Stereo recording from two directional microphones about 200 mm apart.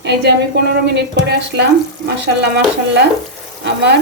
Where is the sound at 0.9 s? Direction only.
55° right (ahead or behind).